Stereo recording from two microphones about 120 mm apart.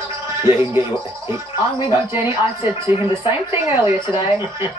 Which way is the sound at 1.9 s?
25° right (ahead or behind).